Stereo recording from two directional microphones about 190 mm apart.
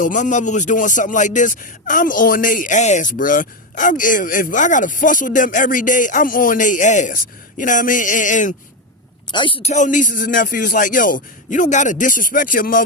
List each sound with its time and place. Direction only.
0.0 s speech: 40° left (ahead or behind)
9.3 s speech: 25° left (ahead or behind); by 12.8 s 45° left (ahead or behind)